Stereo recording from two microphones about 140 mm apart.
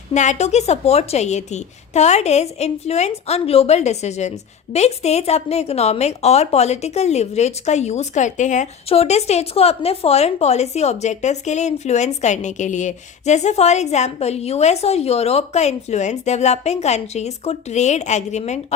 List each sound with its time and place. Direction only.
0.1 s a woman's voice: 55° left (ahead or behind)